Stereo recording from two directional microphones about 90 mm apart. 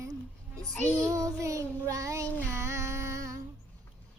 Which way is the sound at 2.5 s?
30° right (ahead or behind).